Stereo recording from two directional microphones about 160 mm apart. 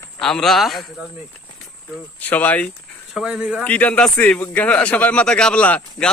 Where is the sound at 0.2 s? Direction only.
5° left (ahead or behind).